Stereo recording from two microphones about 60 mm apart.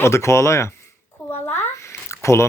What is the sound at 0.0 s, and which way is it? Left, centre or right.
Speech, left.